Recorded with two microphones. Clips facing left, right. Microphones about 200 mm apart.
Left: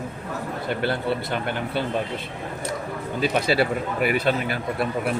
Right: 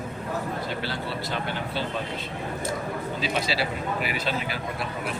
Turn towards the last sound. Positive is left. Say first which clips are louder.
# left 7 dB
turn(degrees=55)  # may be behind; listen again after turning